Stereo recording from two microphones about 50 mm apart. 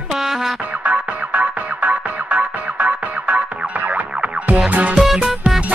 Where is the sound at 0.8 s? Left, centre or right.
Right.